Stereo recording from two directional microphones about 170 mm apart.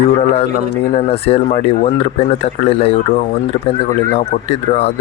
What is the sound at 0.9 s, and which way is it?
Speech, 35° left (ahead or behind).